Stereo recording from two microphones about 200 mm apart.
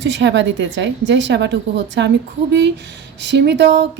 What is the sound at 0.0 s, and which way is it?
A woman's voice, 60° right (ahead or behind).